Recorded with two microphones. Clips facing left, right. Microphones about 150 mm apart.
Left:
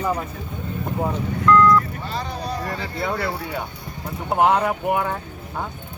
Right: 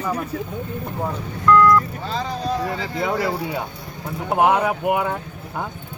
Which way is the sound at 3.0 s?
15° right (ahead or behind).